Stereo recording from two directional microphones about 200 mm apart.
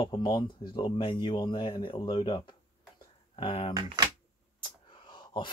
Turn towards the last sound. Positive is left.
turn(degrees=25)  # may be behind; listen again after turning